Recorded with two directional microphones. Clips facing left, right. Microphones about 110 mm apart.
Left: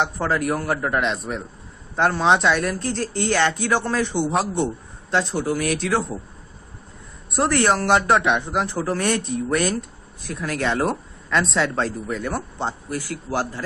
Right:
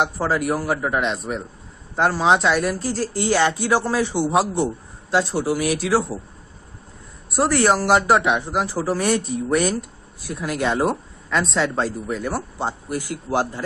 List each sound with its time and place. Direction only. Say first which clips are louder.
0.0 s speech: right 1 dB; 5° right (ahead or behind)
7.2 s speech: right 1 dB; 5° right (ahead or behind)